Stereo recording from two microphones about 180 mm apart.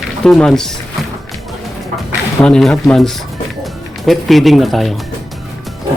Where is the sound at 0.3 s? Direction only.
5° left (ahead or behind).